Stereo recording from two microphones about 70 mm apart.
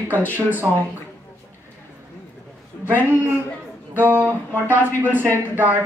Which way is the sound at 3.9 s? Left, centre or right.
Right.